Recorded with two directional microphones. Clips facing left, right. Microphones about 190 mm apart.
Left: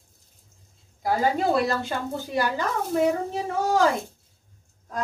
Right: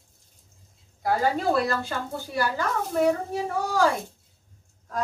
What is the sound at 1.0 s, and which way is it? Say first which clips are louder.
Speech: left 1 dB; 20° left (ahead or behind).